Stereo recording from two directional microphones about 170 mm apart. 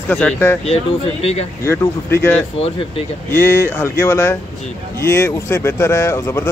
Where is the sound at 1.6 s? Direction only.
15° left (ahead or behind).